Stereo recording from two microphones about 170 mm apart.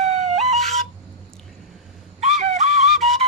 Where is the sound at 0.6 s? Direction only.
Centre (ahead or behind).